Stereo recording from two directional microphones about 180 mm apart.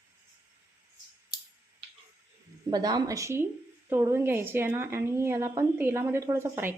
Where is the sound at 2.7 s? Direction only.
20° right (ahead or behind).